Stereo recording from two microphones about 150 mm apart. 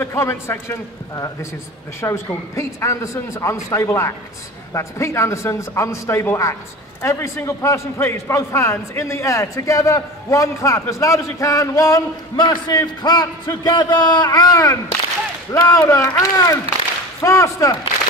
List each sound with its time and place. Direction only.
0.0 s a man's voice: 15° left (ahead or behind)